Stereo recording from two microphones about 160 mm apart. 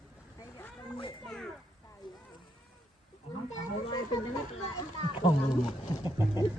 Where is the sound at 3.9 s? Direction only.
30° left (ahead or behind).